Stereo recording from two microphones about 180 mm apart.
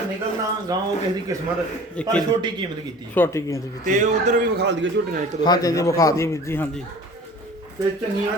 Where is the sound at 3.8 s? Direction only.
45° right (ahead or behind).